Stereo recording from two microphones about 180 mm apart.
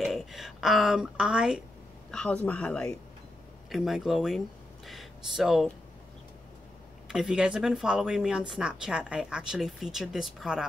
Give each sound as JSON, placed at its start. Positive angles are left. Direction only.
{"t": 0.0, "sound": "a sound", "side_deg": 0}
{"t": 2.0, "sound": "speech", "side_deg": 5}
{"t": 7.1, "sound": "speech", "side_deg": -5}